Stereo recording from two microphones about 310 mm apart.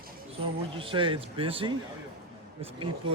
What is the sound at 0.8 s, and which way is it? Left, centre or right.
Speech, centre.